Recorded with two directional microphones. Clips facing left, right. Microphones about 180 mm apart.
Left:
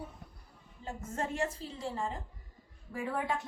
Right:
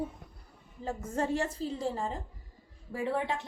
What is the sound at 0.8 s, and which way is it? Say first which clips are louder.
A woman's voice: right 5 dB; 35° right (ahead or behind).